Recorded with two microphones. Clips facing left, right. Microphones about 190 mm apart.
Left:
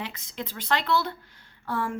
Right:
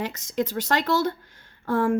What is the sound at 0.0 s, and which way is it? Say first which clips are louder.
Speech: right 9 dB; 45° right (ahead or behind).